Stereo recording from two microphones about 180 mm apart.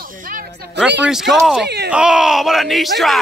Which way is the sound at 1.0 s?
Centre (ahead or behind).